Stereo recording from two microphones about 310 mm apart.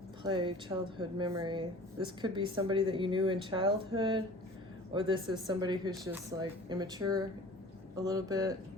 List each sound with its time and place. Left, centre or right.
0.2 s speech: centre